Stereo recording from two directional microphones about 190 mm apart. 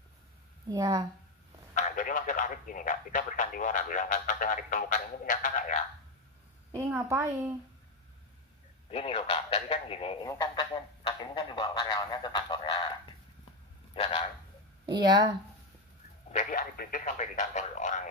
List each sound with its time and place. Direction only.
0.7 s a woman's voice: 20° right (ahead or behind)
1.8 s a man's voice: 45° left (ahead or behind)
6.7 s a woman's voice: 15° right (ahead or behind)
8.9 s speech: 30° left (ahead or behind)
10.2 s speech: 20° left (ahead or behind)
14.9 s a woman's voice: 25° right (ahead or behind)
16.3 s speech: 45° left (ahead or behind)